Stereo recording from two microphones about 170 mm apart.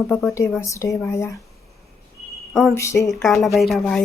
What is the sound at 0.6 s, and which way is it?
Speech, 20° left (ahead or behind).